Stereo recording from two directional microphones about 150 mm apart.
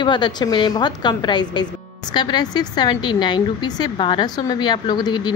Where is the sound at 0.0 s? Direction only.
30° left (ahead or behind).